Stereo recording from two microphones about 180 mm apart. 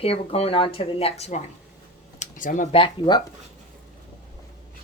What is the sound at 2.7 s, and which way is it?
Speech, 25° left (ahead or behind).